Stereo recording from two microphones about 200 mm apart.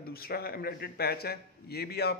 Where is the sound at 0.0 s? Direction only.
50° left (ahead or behind).